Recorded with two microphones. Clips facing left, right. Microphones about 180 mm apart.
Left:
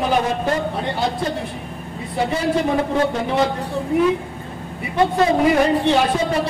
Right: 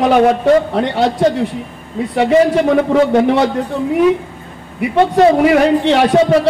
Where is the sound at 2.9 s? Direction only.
75° right (ahead or behind).